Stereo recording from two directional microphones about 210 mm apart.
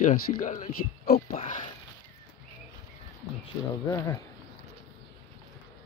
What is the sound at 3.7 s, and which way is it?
Speech, 15° left (ahead or behind).